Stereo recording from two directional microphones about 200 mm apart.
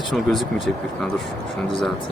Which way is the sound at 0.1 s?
Centre (ahead or behind).